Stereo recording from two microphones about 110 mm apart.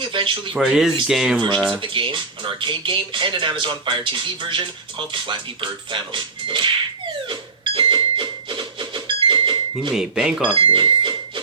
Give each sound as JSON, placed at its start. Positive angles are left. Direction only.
{"t": 0.0, "sound": "speech", "side_deg": -50}
{"t": 0.5, "sound": "speech", "side_deg": -5}
{"t": 1.8, "sound": "speech", "side_deg": -50}
{"t": 7.8, "sound": "a sound", "side_deg": -50}
{"t": 9.9, "sound": "speech", "side_deg": -5}
{"t": 10.5, "sound": "speech", "side_deg": -55}